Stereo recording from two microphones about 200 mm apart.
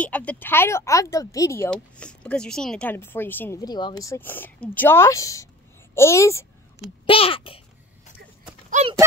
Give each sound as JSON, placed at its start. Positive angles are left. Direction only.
{"t": 0.0, "sound": "speech", "side_deg": 5}
{"t": 7.1, "sound": "a sound", "side_deg": 25}
{"t": 8.6, "sound": "clip-clop", "side_deg": -35}